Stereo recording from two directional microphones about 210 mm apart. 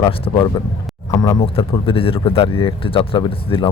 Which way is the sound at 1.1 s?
15° left (ahead or behind).